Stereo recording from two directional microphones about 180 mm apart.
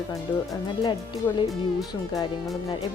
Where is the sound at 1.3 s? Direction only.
15° left (ahead or behind).